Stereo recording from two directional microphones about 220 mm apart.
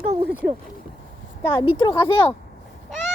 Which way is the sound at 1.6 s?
20° left (ahead or behind).